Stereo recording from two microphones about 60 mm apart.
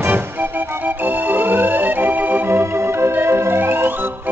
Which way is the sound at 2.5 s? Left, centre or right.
Right.